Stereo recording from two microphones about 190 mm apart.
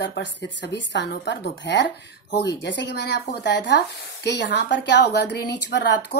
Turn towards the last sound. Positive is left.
turn(degrees=65)  # may be behind; listen again after turning